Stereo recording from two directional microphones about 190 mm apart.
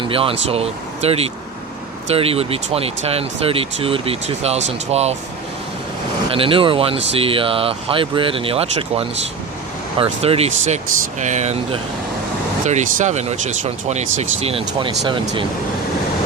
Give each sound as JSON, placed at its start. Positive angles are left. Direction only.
{"t": 0.0, "sound": "speech", "side_deg": -30}
{"t": 6.3, "sound": "speech", "side_deg": -30}